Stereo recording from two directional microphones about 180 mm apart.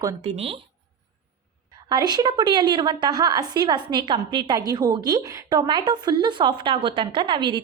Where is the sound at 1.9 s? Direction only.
20° right (ahead or behind).